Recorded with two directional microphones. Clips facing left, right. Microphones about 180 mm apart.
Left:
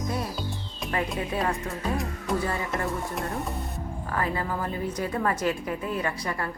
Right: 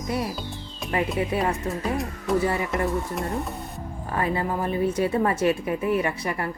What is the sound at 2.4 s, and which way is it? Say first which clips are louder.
Speech: right 4 dB; 20° right (ahead or behind).